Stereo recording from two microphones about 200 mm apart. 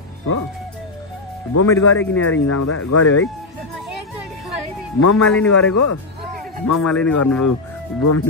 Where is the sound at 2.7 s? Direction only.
90° left.